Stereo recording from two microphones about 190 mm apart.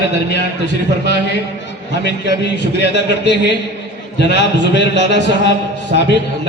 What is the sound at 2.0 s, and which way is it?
A man's voice, 65° left (ahead or behind).